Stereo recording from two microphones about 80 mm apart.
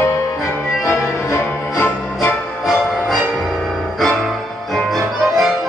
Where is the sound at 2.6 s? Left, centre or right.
Centre.